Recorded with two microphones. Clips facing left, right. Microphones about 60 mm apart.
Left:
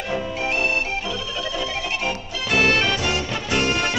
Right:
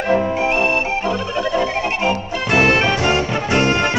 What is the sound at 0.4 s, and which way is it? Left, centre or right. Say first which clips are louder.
Music: right 6 dB; right.